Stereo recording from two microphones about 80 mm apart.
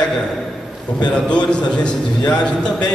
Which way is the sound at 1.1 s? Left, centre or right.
Centre.